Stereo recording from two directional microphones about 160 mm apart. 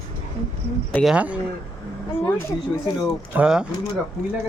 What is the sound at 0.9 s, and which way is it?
Speech, centre (ahead or behind).